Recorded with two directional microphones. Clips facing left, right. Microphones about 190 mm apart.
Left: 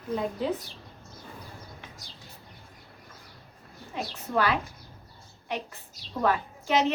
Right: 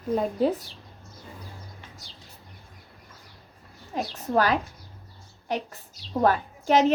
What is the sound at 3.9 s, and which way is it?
A woman's voice, 40° right (ahead or behind).